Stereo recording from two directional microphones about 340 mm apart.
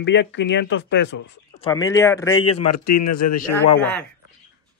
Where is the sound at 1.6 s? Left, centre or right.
Centre.